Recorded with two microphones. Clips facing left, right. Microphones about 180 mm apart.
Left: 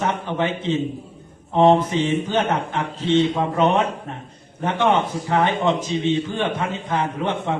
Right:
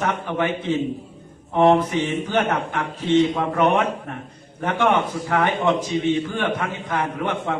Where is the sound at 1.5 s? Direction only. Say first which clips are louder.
Left 1 dB; 20° left (ahead or behind).